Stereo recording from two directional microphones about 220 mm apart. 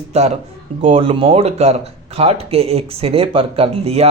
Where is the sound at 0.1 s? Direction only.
30° right (ahead or behind).